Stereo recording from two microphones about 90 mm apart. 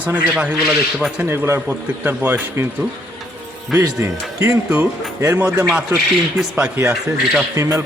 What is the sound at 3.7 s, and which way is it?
Speech, 30° right (ahead or behind).